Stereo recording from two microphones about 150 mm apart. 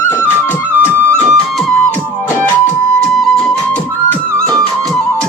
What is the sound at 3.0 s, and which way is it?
Music, 5° left (ahead or behind).